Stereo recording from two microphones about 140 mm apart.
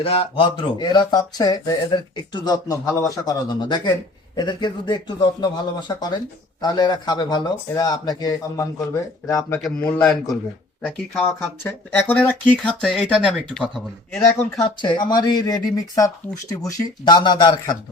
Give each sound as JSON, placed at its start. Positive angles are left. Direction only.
{"t": 0.0, "sound": "speech", "side_deg": 40}
{"t": 10.0, "sound": "speech", "side_deg": 5}
{"t": 14.8, "sound": "speech", "side_deg": 30}